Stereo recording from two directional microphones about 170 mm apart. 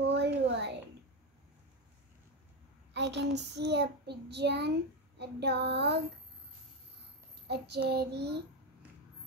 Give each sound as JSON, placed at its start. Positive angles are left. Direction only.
{"t": 0.0, "sound": "a sound", "side_deg": -85}
{"t": 2.9, "sound": "child singing", "side_deg": -90}
{"t": 7.4, "sound": "child singing", "side_deg": -80}